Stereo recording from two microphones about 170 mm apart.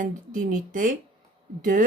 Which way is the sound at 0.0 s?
55° right (ahead or behind).